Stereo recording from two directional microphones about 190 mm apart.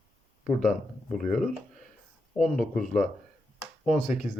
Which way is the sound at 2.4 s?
Centre (ahead or behind).